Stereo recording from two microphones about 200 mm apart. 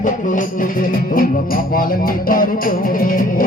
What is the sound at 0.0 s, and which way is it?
Music, 40° left (ahead or behind).